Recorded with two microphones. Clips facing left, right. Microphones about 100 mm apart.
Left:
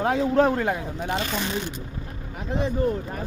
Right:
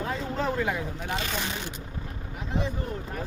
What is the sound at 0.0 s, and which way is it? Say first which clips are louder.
Speech: left 9 dB; 65° left (ahead or behind).